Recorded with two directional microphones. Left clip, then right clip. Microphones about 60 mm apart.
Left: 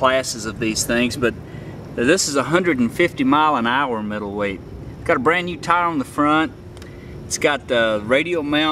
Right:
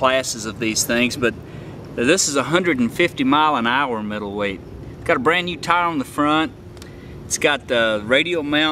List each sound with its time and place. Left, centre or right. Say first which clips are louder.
0.0 s speech: even; centre